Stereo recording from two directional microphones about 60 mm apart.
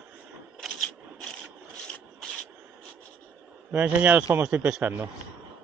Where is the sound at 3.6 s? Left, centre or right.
Right.